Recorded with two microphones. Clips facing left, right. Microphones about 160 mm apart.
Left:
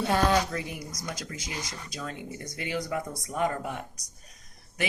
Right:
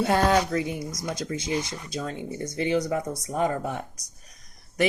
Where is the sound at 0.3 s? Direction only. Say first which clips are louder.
Right 4 dB; 20° right (ahead or behind).